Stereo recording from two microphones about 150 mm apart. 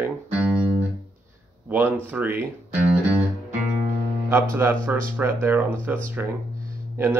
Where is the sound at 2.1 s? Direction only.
10° right (ahead or behind).